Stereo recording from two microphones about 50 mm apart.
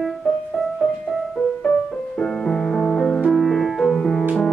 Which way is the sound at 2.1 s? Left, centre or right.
Centre.